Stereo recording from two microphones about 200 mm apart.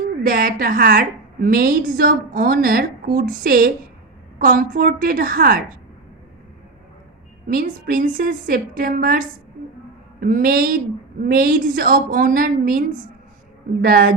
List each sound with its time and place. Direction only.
0.3 s a woman's voice: 45° right (ahead or behind)
7.4 s a woman's voice: 45° right (ahead or behind)
13.8 s a woman's voice: 50° right (ahead or behind)